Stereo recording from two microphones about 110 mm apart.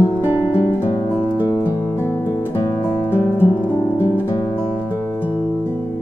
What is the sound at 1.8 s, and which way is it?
Guitar, 25° left (ahead or behind).